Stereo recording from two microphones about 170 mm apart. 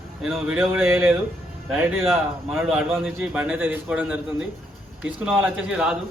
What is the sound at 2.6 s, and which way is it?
A man's voice, 5° right (ahead or behind).